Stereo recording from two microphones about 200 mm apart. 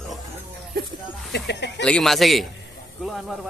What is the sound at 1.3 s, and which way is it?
Speech, 60° left (ahead or behind).